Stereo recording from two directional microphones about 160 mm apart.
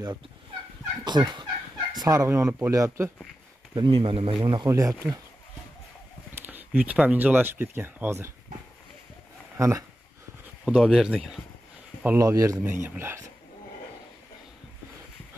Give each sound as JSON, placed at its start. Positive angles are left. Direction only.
{"t": 1.0, "sound": "speech", "side_deg": -25}
{"t": 3.7, "sound": "speech", "side_deg": -30}
{"t": 4.6, "sound": "speech", "side_deg": -20}
{"t": 6.3, "sound": "speech", "side_deg": -10}
{"t": 9.6, "sound": "speech", "side_deg": -20}
{"t": 10.6, "sound": "speech", "side_deg": -5}
{"t": 12.0, "sound": "speech", "side_deg": -15}